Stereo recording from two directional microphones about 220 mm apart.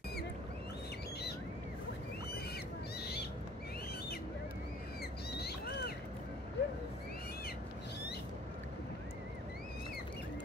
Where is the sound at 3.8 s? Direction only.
45° left (ahead or behind).